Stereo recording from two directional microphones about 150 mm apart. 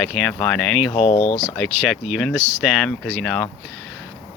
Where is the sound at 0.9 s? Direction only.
45° left (ahead or behind).